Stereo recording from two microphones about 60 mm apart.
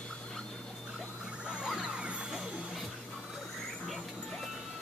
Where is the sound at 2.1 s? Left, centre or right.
Centre.